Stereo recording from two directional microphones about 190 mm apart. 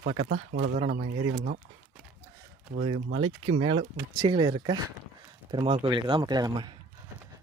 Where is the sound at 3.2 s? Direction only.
30° right (ahead or behind).